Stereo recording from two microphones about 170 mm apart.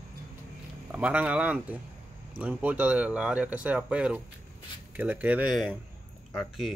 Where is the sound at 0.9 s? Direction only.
10° right (ahead or behind).